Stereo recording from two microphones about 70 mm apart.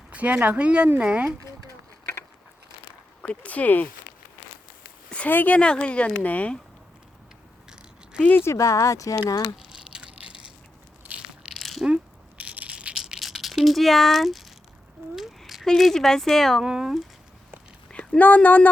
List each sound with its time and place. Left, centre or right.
0.1 s speech: centre
3.2 s speech: left
5.0 s a sound: centre
5.3 s speech: left
5.5 s speech: centre
8.5 s speech: left
9.6 s a sound: centre
11.4 s crushing: centre
12.4 s a sound: centre
13.1 s a sound: centre
15.6 s speech: centre
16.6 s speech: centre
17.9 s speech: centre